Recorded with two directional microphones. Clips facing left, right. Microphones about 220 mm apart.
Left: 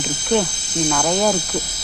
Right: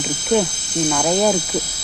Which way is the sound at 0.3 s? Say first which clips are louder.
Right 1 dB; 5° right (ahead or behind).